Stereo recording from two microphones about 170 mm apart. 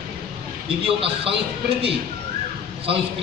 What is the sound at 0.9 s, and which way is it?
Speech, 35° right (ahead or behind).